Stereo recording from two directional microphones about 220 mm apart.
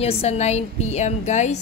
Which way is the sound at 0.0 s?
30° left (ahead or behind).